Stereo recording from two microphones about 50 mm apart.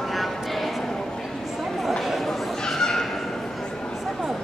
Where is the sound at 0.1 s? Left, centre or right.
Centre.